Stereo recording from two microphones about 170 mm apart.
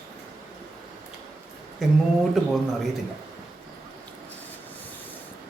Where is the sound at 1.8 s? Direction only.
Centre (ahead or behind).